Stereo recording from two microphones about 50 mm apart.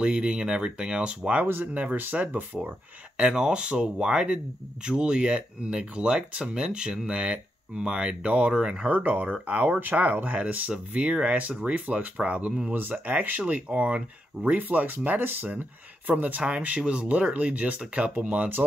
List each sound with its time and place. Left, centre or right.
0.0 s speech: centre
1.4 s speech: right
3.2 s speech: centre
8.9 s speech: right
9.8 s speech: right
12.7 s speech: right
13.0 s speech: right